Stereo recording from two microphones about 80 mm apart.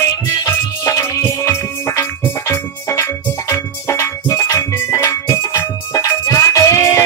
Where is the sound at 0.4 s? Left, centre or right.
Left.